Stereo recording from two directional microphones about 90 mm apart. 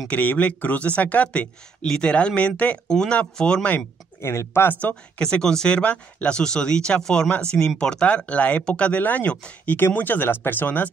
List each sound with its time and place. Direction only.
0.1 s speech: 15° left (ahead or behind)
3.7 s speech: 30° left (ahead or behind)
4.8 s speech: 10° left (ahead or behind)